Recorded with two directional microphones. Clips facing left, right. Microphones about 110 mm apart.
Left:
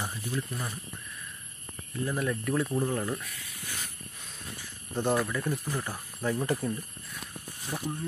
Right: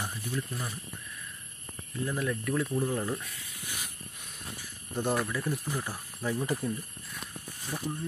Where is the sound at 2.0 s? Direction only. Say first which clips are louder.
Left 1 dB; 5° left (ahead or behind).